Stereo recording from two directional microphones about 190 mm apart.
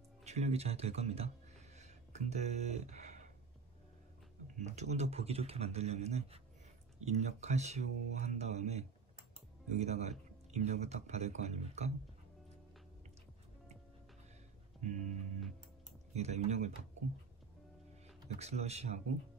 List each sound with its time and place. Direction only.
0.2 s speech: 35° right (ahead or behind)
1.8 s a sound: 35° right (ahead or behind)
4.6 s speech: 35° right (ahead or behind)
14.8 s music: 40° right (ahead or behind)
16.1 s speech: 35° right (ahead or behind)
18.3 s speech: 35° right (ahead or behind)